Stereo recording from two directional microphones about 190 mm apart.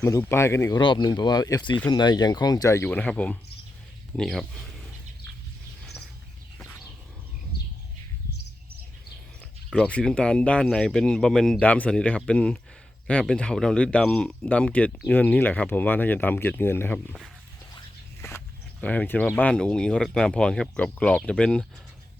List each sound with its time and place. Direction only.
0.0 s speech: 15° left (ahead or behind)
0.8 s speech: 25° left (ahead or behind); by 4.4 s centre (ahead or behind)
9.6 s speech: 5° left (ahead or behind)
18.3 s speech: 10° left (ahead or behind)